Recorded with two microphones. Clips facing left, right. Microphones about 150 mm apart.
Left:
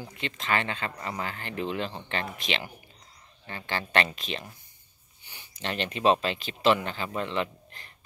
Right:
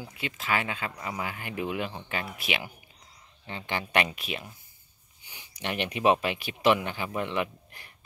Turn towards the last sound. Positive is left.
turn(degrees=-10)  # may be behind; listen again after turning